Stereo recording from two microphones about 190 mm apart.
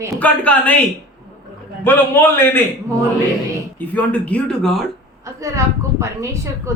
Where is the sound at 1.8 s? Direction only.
10° left (ahead or behind).